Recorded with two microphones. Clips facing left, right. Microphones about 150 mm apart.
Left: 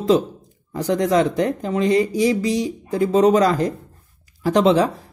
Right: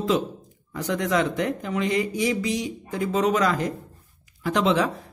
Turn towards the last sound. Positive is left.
turn(degrees=35)  # may be behind; listen again after turning